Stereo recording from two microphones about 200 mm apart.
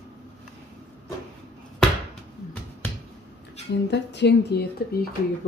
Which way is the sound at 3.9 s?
60° left (ahead or behind).